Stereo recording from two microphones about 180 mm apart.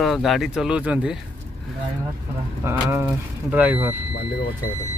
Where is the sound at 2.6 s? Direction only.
15° right (ahead or behind).